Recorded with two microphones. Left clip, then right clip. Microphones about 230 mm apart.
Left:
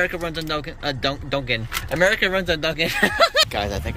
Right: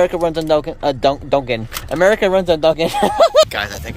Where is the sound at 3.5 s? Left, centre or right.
Centre.